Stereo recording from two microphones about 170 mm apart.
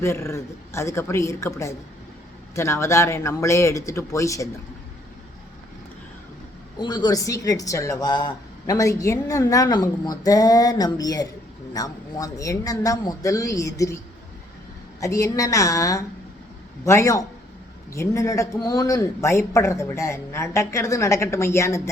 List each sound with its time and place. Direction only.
0.0 s speech: 15° left (ahead or behind)
6.7 s speech: 25° left (ahead or behind)
15.0 s speech: 20° left (ahead or behind)